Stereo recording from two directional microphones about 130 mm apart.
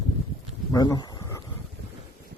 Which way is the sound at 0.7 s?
30° left (ahead or behind).